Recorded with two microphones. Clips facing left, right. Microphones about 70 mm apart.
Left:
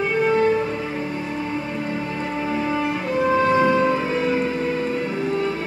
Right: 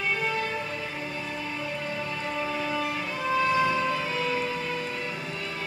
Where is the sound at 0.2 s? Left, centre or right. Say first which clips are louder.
Left 11 dB; left.